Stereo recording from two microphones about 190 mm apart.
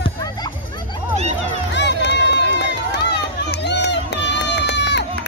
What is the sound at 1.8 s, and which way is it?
Run, 65° left (ahead or behind).